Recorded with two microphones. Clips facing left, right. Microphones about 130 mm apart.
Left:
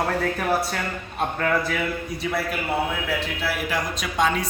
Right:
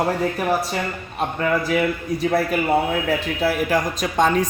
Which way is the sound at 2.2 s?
45° right (ahead or behind).